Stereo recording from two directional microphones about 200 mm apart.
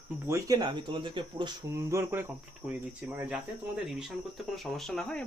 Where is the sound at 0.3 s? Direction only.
15° right (ahead or behind).